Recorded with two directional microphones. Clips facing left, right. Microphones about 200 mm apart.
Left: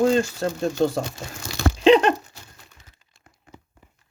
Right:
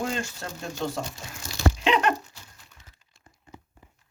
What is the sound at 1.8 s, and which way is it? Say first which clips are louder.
Patter: left 10 dB; 30° left (ahead or behind).